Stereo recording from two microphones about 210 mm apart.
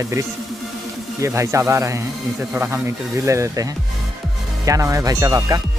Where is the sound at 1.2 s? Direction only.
15° right (ahead or behind).